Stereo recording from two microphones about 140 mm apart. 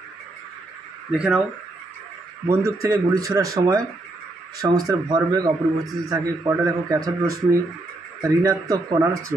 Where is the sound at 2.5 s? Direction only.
20° right (ahead or behind).